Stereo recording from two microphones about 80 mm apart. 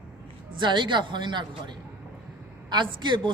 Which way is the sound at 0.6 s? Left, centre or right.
Right.